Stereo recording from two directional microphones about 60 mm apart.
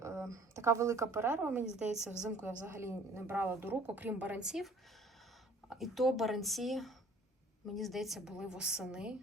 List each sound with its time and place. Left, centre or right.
0.0 s speech: right
1.8 s a woman's voice: centre
2.4 s a woman's voice: right
4.4 s a woman's voice: centre
5.6 s a woman's voice: centre